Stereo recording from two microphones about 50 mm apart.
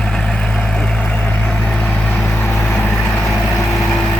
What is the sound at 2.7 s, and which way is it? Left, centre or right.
Vehicle, left.